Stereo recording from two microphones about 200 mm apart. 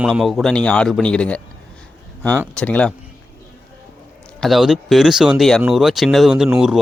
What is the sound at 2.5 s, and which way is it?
Speech, 5° left (ahead or behind).